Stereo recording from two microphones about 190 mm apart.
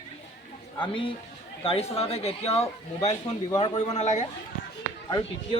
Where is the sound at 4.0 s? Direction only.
40° left (ahead or behind).